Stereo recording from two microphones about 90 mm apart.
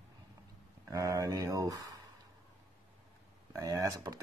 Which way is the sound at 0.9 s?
40° right (ahead or behind).